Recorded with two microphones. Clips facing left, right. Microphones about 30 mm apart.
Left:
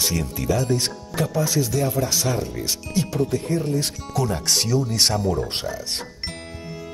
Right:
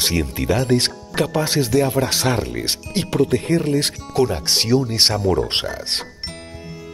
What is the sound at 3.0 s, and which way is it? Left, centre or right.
Speech, right.